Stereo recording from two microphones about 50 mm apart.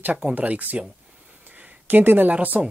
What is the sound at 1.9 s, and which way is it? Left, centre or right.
Speech, right.